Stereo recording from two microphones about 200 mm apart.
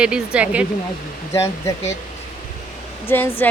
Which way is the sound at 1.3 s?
15° left (ahead or behind).